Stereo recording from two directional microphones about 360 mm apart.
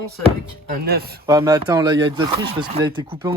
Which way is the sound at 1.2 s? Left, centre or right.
Centre.